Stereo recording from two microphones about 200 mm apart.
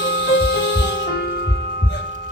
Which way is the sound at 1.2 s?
50° left (ahead or behind).